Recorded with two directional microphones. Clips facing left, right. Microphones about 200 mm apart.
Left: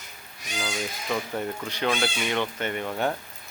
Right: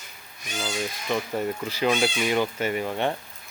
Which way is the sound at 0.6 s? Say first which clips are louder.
Right 2 dB; centre (ahead or behind).